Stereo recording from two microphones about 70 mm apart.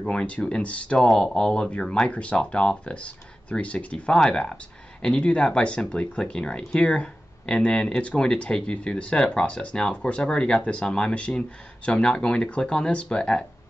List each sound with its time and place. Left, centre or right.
0.0 s speech: centre